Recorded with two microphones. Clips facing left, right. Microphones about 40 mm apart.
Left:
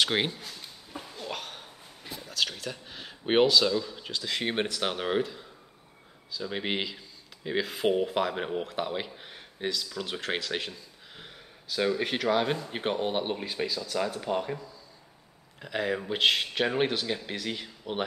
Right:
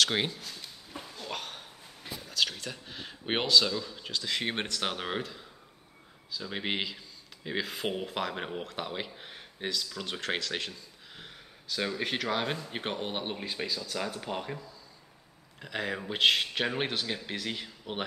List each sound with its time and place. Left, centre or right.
0.0 s speech: centre
0.9 s a sound: centre
2.1 s speech: centre